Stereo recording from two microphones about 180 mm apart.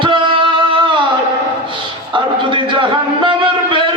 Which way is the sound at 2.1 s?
25° right (ahead or behind).